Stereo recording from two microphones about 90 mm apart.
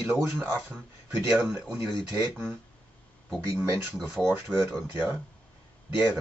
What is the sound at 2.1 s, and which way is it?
Speech, 25° right (ahead or behind).